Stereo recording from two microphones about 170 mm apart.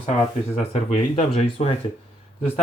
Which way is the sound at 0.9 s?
35° left (ahead or behind).